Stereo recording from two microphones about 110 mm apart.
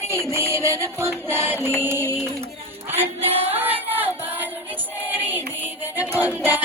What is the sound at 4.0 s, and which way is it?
Music, 15° right (ahead or behind).